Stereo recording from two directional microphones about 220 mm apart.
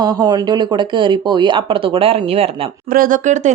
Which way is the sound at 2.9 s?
40° right (ahead or behind).